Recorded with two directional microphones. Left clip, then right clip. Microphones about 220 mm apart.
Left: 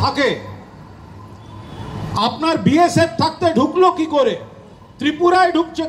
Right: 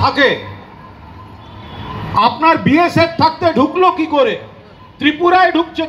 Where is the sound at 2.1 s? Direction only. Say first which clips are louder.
Right 7 dB; 30° right (ahead or behind).